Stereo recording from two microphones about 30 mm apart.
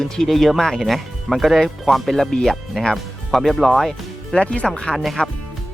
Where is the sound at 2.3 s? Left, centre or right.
Left.